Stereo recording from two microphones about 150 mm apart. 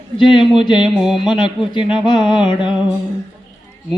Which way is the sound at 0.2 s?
35° left (ahead or behind).